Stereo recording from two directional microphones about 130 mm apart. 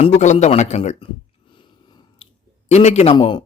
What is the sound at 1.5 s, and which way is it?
Biting, 40° left (ahead or behind).